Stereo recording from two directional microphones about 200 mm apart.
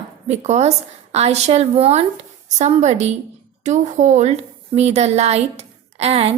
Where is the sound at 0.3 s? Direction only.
35° right (ahead or behind).